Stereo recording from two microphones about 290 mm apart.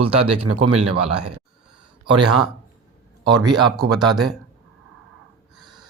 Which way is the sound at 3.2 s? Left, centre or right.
Centre.